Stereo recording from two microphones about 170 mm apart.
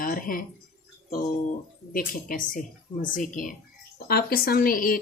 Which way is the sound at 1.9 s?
55° left (ahead or behind).